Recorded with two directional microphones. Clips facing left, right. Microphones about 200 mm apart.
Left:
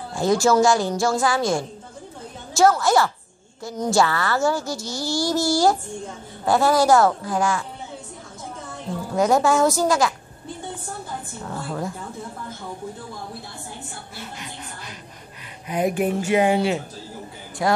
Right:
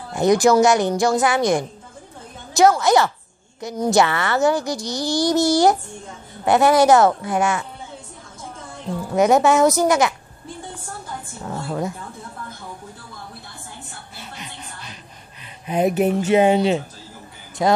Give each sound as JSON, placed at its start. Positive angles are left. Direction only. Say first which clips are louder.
{"t": 0.1, "sound": "a woman's voice", "louder": "right 3 dB", "side_deg": -20}
{"t": 9.1, "sound": "a woman's voice", "louder": "right 3 dB", "side_deg": -20}
{"t": 14.1, "sound": "music", "louder": "even", "side_deg": -20}
{"t": 15.6, "sound": "a woman's voice", "louder": "right 3 dB", "side_deg": -25}